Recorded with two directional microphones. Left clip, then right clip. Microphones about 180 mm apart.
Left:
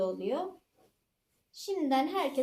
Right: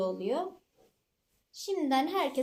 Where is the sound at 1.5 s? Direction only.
40° right (ahead or behind).